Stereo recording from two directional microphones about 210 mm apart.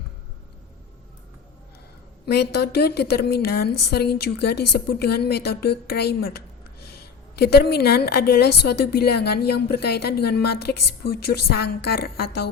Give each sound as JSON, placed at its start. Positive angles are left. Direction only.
{"t": 2.2, "sound": "a woman's voice", "side_deg": 50}